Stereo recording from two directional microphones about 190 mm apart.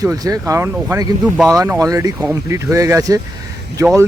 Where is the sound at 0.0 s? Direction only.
20° right (ahead or behind).